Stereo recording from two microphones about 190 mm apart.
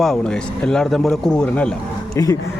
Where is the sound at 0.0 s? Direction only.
5° left (ahead or behind).